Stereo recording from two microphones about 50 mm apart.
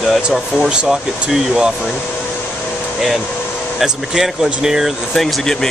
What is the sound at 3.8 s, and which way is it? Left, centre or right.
Speech, centre.